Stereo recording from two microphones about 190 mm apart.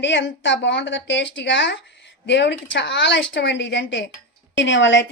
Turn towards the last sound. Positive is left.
turn(degrees=75)  # may be behind; listen again after turning